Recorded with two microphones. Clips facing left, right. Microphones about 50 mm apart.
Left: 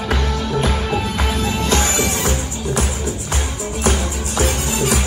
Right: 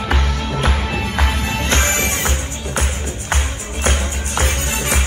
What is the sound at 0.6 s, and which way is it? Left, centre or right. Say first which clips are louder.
Music: left 1 dB; right.